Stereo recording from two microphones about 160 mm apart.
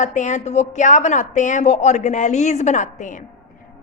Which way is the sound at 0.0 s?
50° left (ahead or behind).